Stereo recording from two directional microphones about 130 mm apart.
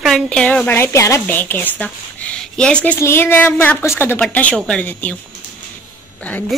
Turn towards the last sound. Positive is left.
turn(degrees=10)  # may be behind; listen again after turning